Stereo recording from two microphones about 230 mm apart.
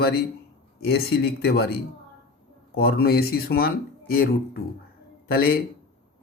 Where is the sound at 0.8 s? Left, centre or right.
Left.